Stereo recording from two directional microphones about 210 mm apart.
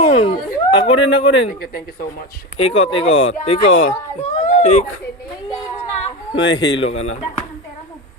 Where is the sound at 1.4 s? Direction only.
45° left (ahead or behind).